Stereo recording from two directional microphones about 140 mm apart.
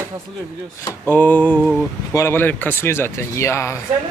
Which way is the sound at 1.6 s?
Centre (ahead or behind).